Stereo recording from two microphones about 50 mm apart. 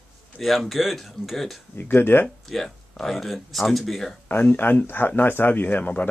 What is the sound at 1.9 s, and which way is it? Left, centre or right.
Speech, left.